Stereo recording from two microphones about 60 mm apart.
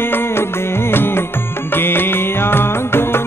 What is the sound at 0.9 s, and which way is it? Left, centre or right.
Music, left.